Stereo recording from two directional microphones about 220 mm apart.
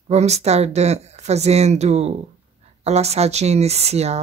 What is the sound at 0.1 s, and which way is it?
Speech, 30° right (ahead or behind).